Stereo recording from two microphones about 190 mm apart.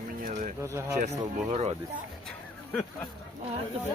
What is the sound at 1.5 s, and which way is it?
Speech, 35° right (ahead or behind).